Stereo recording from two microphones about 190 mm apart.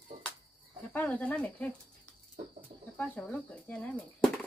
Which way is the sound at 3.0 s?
5° left (ahead or behind).